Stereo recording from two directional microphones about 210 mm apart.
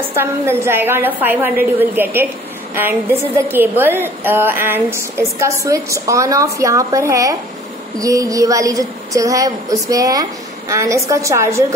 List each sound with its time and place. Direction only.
0.1 s a woman's voice: 10° right (ahead or behind)